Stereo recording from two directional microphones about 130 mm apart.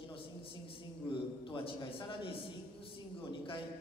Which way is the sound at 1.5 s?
40° left (ahead or behind).